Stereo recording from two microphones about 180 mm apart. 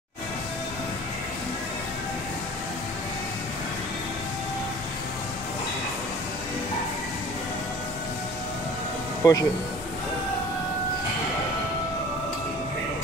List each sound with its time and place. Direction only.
9.2 s speech: 20° left (ahead or behind)